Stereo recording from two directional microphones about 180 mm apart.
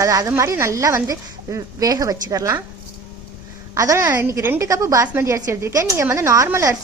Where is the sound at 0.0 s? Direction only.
20° right (ahead or behind).